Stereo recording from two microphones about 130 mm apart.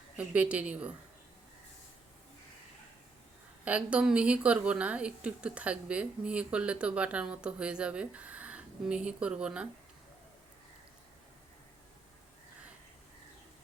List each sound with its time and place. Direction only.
0.2 s a woman's voice: 10° right (ahead or behind)
3.6 s a woman's voice: 10° right (ahead or behind)